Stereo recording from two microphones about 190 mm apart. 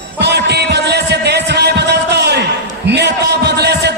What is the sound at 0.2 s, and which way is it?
Music, 60° right (ahead or behind).